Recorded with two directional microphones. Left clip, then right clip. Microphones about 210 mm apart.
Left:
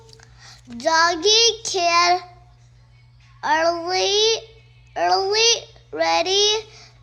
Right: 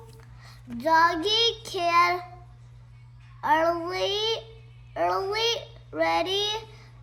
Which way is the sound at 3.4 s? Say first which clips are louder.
Left 4 dB; 40° left (ahead or behind).